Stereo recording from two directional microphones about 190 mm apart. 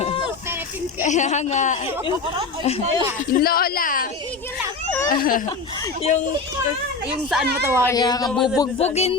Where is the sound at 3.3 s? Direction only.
50° left (ahead or behind).